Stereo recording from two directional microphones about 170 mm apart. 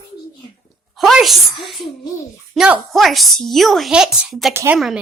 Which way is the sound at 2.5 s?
Centre (ahead or behind).